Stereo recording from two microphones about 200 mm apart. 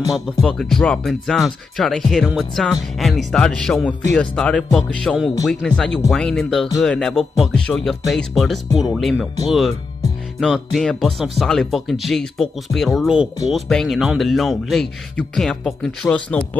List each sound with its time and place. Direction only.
0.1 s a man's voice: centre (ahead or behind)
10.4 s a man's voice: centre (ahead or behind)